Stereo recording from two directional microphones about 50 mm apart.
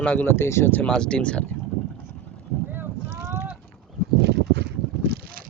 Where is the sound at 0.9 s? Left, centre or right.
Centre.